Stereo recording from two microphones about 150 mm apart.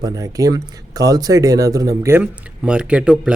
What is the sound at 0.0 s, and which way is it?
Speech, 25° right (ahead or behind).